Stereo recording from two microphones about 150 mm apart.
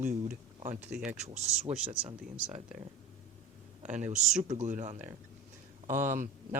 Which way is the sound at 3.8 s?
55° right (ahead or behind).